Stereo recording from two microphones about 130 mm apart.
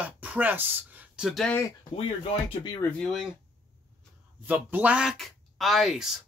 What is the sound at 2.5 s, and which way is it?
Speech, 35° left (ahead or behind).